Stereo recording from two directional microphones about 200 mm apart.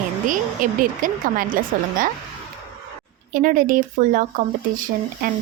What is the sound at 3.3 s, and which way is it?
Speech, 40° right (ahead or behind).